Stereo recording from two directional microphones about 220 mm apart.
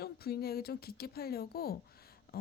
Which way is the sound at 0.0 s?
45° left (ahead or behind).